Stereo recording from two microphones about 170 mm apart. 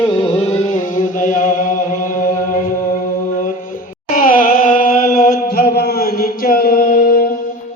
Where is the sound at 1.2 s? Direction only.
50° left (ahead or behind).